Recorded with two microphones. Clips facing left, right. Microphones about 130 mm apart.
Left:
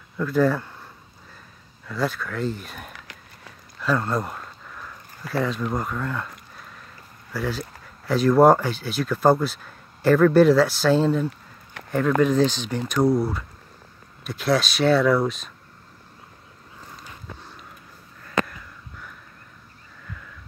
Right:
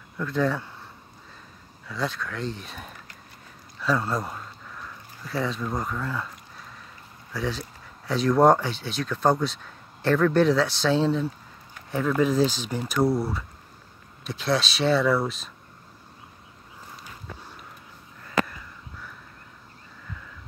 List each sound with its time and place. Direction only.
0.2 s speech: 5° left (ahead or behind)
1.9 s speech: centre (ahead or behind)
7.3 s speech: centre (ahead or behind)
11.7 s a sound: 75° left (ahead or behind)
12.2 s speech: 5° right (ahead or behind)